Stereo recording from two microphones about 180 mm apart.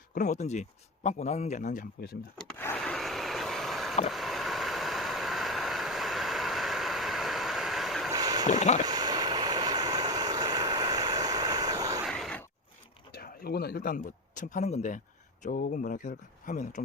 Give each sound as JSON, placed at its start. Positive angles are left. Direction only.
{"t": 0.1, "sound": "a man's voice", "side_deg": 45}
{"t": 2.4, "sound": "wood", "side_deg": 10}
{"t": 2.7, "sound": "vehicle", "side_deg": 5}
{"t": 8.1, "sound": "boat", "side_deg": -20}
{"t": 8.4, "sound": "a man's voice", "side_deg": 40}
{"t": 8.8, "sound": "vehicle", "side_deg": -20}
{"t": 12.0, "sound": "a sound", "side_deg": 0}
{"t": 13.1, "sound": "speech", "side_deg": 60}